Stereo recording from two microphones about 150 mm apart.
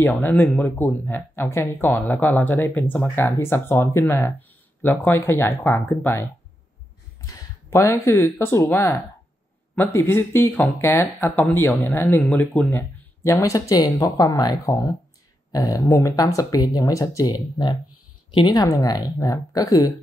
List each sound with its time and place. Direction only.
0.0 s speech: 10° left (ahead or behind)
7.2 s speech: 20° left (ahead or behind)
9.9 s speech: 15° left (ahead or behind)